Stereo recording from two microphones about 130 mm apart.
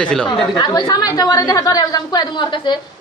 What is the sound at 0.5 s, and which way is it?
A woman's voice, 35° left (ahead or behind).